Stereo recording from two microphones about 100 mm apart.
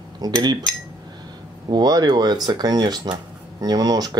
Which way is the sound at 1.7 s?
40° right (ahead or behind).